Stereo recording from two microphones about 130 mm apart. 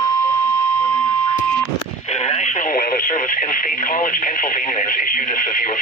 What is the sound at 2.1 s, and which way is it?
Speech, 60° left (ahead or behind).